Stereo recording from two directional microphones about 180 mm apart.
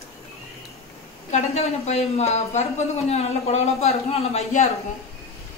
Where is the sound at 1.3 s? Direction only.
35° left (ahead or behind).